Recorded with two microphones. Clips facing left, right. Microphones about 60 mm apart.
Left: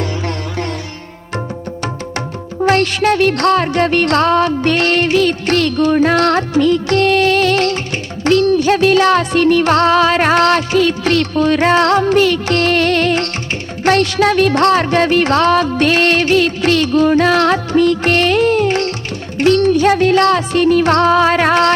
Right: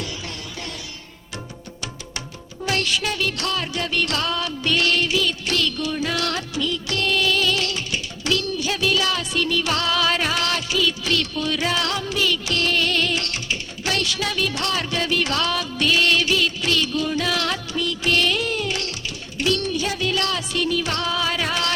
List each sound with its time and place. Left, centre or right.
2.6 s music: left